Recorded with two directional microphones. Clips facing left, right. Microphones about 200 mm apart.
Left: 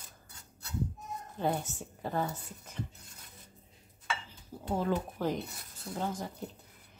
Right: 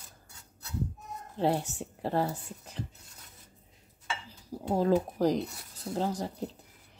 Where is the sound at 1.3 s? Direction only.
30° right (ahead or behind).